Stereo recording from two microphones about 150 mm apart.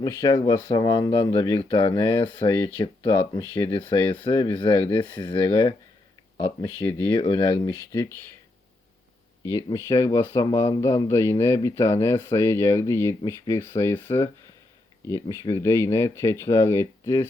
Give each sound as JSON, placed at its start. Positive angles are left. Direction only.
{"t": 0.0, "sound": "speech", "side_deg": 20}
{"t": 7.1, "sound": "speech", "side_deg": 35}
{"t": 9.4, "sound": "speech", "side_deg": 20}